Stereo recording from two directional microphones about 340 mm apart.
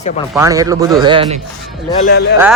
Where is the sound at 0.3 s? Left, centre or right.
Centre.